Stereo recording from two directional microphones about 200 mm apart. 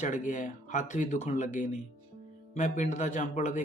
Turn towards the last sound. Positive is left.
turn(degrees=40)  # may be behind; listen again after turning